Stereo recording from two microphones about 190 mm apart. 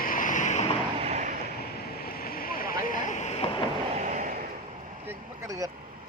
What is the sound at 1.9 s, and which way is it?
Vehicle, 50° left (ahead or behind).